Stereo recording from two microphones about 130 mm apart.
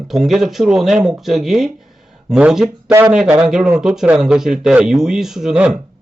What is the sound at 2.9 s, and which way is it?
Speech, 20° right (ahead or behind).